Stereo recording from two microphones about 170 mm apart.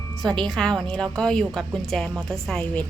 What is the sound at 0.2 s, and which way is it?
A woman's voice, centre (ahead or behind).